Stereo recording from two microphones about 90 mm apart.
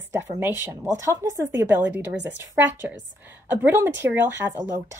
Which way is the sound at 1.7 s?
20° right (ahead or behind).